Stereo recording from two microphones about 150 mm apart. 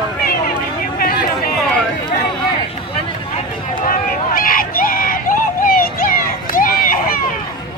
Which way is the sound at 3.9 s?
70° left (ahead or behind).